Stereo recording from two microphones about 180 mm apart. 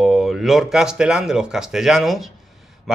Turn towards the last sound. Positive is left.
turn(degrees=0)  # may be behind; listen again after turning